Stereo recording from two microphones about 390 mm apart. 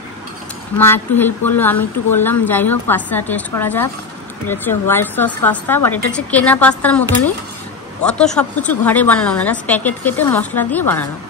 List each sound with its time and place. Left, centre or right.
0.7 s a woman's voice: centre